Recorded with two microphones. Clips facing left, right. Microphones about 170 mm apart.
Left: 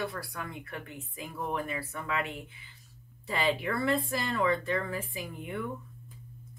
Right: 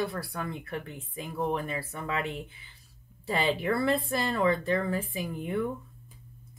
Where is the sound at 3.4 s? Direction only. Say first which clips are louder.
Right 2 dB; 30° right (ahead or behind).